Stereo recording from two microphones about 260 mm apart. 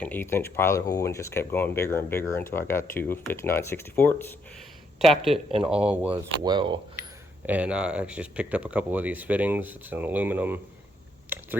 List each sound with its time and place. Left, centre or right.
0.0 s speech: centre
5.5 s speech: right
5.7 s speech: centre
6.4 s speech: centre
7.0 s camera: right
7.4 s speech: centre